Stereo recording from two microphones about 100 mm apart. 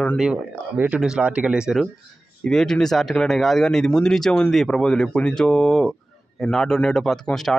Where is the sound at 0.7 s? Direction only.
15° right (ahead or behind).